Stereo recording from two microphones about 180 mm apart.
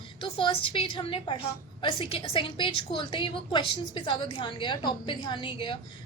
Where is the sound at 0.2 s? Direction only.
30° left (ahead or behind).